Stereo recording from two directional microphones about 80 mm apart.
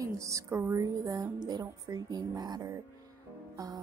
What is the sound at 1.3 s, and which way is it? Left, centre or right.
Speech, right.